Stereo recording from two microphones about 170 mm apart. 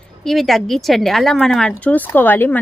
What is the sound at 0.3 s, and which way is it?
Speech, centre (ahead or behind).